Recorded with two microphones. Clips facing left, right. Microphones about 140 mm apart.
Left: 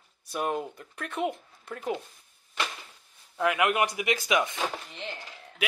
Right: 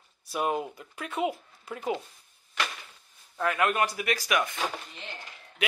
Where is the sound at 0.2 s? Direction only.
5° right (ahead or behind).